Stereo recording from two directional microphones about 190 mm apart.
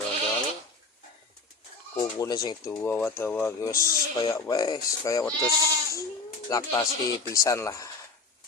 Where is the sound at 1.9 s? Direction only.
20° left (ahead or behind).